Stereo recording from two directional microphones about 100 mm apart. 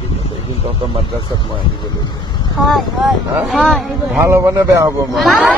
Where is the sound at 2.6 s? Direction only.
Centre (ahead or behind).